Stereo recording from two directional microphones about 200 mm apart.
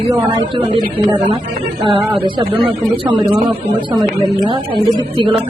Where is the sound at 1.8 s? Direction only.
25° right (ahead or behind).